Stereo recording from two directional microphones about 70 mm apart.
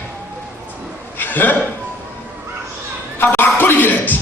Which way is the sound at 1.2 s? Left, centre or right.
Left.